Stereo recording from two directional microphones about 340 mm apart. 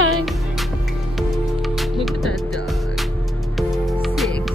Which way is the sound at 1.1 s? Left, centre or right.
Centre.